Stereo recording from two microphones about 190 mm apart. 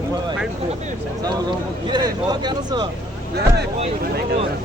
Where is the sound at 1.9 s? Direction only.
20° right (ahead or behind).